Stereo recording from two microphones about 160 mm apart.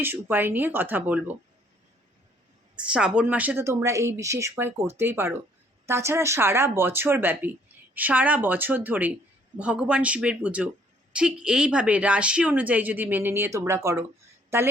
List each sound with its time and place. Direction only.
0.0 s speech: 10° right (ahead or behind)
2.7 s speech: 5° right (ahead or behind)